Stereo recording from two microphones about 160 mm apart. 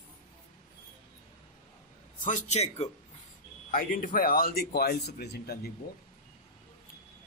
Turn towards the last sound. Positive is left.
turn(degrees=75)  # may be behind; listen again after turning